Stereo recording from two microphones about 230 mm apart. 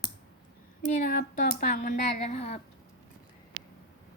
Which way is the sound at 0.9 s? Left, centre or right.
Left.